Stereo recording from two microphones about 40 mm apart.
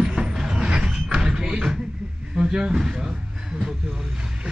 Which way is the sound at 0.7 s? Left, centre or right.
Right.